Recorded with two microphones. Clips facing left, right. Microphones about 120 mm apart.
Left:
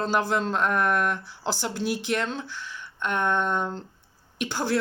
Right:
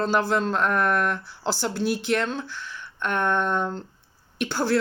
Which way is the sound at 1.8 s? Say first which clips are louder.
Right 3 dB; 55° right (ahead or behind).